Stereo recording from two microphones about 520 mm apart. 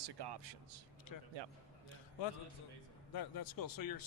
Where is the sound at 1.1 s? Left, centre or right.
Left.